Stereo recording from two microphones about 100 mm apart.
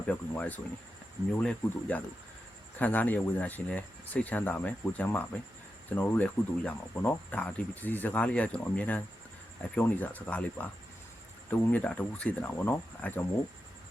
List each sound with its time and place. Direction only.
0.1 s speech: 15° left (ahead or behind)